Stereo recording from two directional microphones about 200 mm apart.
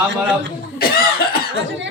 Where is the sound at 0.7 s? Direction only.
50° left (ahead or behind).